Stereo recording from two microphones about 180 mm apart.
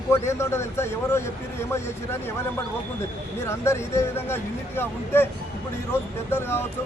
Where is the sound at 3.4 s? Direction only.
15° left (ahead or behind).